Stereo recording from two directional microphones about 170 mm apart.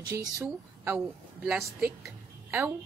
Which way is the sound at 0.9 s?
5° right (ahead or behind).